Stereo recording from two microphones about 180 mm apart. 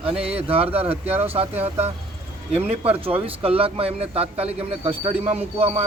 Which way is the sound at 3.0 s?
30° right (ahead or behind).